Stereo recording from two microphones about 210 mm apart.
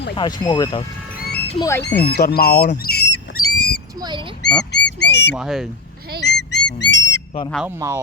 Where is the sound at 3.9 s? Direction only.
20° right (ahead or behind).